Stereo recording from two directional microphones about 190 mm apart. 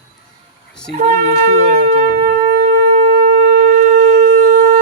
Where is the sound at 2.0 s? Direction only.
50° right (ahead or behind).